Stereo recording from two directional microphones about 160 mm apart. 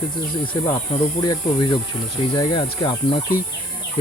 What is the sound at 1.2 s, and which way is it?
Speech, 25° left (ahead or behind).